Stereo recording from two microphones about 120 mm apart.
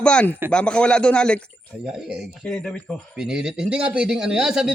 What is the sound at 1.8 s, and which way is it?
Speech, 5° right (ahead or behind).